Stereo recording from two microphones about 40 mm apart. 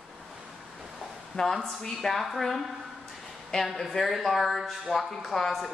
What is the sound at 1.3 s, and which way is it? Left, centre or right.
Speech, centre.